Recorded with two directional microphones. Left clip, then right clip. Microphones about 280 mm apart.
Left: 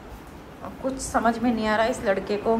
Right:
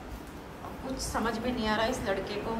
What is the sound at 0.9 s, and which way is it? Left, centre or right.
A woman's voice, centre.